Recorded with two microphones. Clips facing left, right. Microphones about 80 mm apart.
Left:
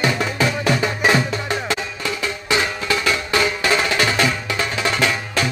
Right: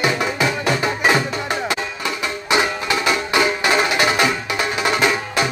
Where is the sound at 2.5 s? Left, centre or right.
Right.